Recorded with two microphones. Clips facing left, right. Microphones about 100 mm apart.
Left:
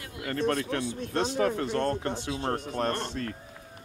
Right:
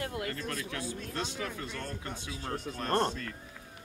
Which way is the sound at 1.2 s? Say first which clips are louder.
Left 13 dB; 40° left (ahead or behind).